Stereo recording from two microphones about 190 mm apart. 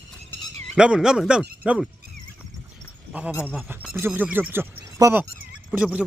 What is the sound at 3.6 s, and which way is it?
Speech, 10° right (ahead or behind).